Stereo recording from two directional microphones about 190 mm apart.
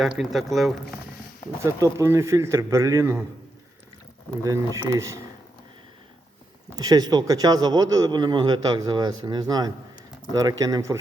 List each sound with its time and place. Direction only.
0.0 s speech: centre (ahead or behind)
1.6 s a man's voice: 15° right (ahead or behind)
4.4 s a man's voice: 15° right (ahead or behind)
6.7 s a man's voice: 20° right (ahead or behind)